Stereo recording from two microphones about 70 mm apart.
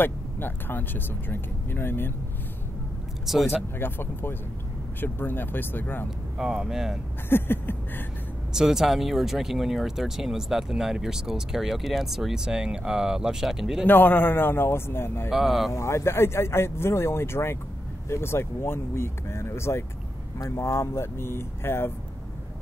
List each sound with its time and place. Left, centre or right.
0.0 s speech: left
3.3 s speech: centre
3.8 s speech: left
6.3 s speech: centre
7.2 s speech: left
8.5 s speech: centre
13.8 s speech: left
15.3 s speech: centre
15.7 s speech: left